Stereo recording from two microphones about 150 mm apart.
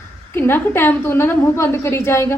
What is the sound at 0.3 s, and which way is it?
A woman's voice, 15° left (ahead or behind).